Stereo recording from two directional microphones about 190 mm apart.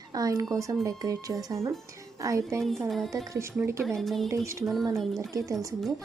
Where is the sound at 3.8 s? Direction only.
Centre (ahead or behind).